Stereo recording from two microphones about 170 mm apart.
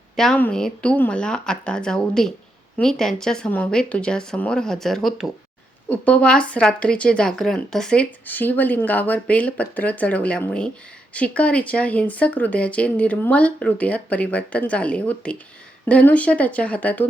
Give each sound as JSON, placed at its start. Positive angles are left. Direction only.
{"t": 0.2, "sound": "speech", "side_deg": 5}